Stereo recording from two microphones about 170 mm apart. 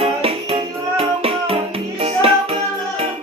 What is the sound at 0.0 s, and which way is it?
Music, 35° right (ahead or behind).